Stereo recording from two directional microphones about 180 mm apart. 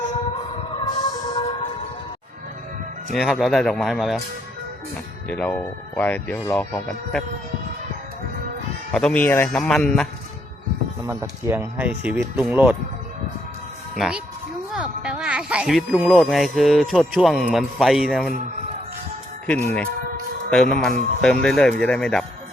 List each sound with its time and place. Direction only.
0.9 s music: 25° left (ahead or behind)
3.2 s speech: centre (ahead or behind)
5.3 s speech: 10° left (ahead or behind)
8.9 s speech: 5° left (ahead or behind)
11.0 s speech: 15° right (ahead or behind)
13.9 s speech: centre (ahead or behind)
19.6 s speech: 10° left (ahead or behind)